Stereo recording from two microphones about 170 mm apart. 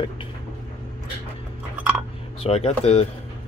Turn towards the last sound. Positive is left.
turn(degrees=35)  # may be behind; listen again after turning